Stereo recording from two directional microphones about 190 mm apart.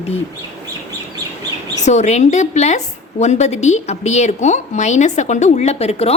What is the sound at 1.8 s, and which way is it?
A woman's voice, 35° left (ahead or behind).